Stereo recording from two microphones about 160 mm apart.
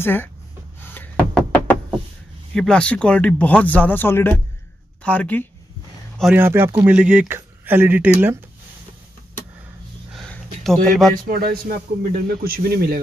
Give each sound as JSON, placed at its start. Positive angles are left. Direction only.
{"t": 0.0, "sound": "speech", "side_deg": 15}
{"t": 0.8, "sound": "knock", "side_deg": 10}
{"t": 2.5, "sound": "speech", "side_deg": 5}
{"t": 6.3, "sound": "speech", "side_deg": -15}
{"t": 10.1, "sound": "a sound", "side_deg": 0}
{"t": 11.2, "sound": "speech", "side_deg": -65}